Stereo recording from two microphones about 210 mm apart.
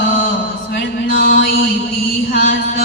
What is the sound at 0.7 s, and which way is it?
Mantra, 45° left (ahead or behind).